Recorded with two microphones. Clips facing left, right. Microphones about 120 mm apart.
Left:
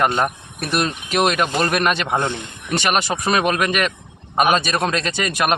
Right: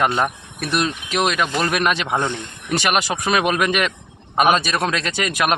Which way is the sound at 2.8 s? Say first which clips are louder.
Left 1 dB; 10° right (ahead or behind).